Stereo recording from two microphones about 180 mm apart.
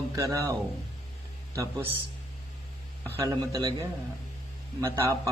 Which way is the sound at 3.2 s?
20° right (ahead or behind).